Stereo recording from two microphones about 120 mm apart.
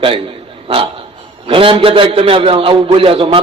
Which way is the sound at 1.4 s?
50° right (ahead or behind).